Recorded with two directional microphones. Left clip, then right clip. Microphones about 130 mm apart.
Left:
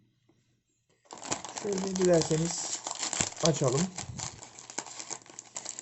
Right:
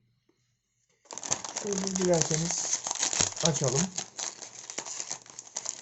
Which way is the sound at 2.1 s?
15° left (ahead or behind).